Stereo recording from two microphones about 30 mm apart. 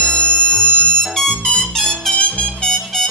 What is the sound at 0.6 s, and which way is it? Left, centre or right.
Music, right.